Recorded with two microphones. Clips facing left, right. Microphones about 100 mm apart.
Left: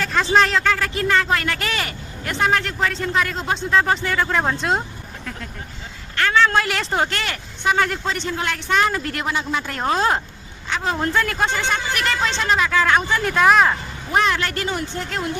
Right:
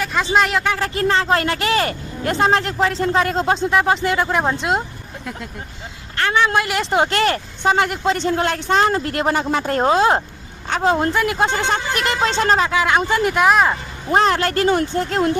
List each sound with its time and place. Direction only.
0.0 s speech: 5° right (ahead or behind)
0.8 s speech: 30° right (ahead or behind); by 4.8 s 10° right (ahead or behind)
6.1 s speech: 20° right (ahead or behind)
7.0 s speech: 30° right (ahead or behind)
9.2 s speech: 45° right (ahead or behind)
9.9 s speech: 20° right (ahead or behind)
10.7 s speech: 40° right (ahead or behind)
10.9 s speech: 20° right (ahead or behind)
12.7 s speech: 15° right (ahead or behind)
13.4 s speech: 5° right (ahead or behind)
14.2 s speech: 35° right (ahead or behind)
14.9 s speech: 30° right (ahead or behind)